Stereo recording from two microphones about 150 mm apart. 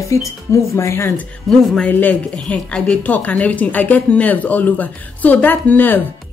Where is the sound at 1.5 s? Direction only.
5° left (ahead or behind).